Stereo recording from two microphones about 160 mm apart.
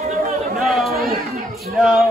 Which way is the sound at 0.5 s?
Centre (ahead or behind).